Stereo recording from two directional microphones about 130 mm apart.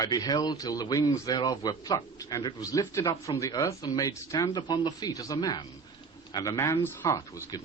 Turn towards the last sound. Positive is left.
turn(degrees=30)  # may be behind; listen again after turning